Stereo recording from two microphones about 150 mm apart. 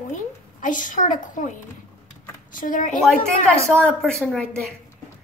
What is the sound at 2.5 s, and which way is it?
Speech, 60° left (ahead or behind).